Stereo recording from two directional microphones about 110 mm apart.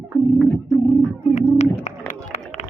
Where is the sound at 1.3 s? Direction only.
90° left.